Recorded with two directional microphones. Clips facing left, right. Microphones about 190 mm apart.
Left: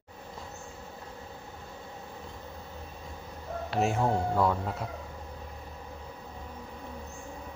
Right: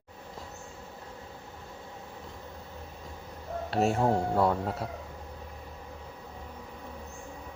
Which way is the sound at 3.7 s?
35° right (ahead or behind).